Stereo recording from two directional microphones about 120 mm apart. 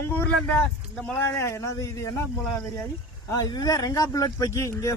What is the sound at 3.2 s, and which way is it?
Speech, 30° left (ahead or behind).